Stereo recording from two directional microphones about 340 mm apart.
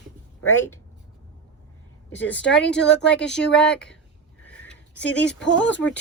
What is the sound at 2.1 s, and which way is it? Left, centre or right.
Speech, centre.